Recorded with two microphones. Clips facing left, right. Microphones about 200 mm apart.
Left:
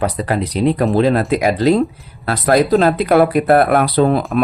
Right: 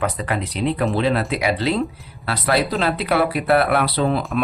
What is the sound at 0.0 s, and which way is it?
Speech, 35° left (ahead or behind).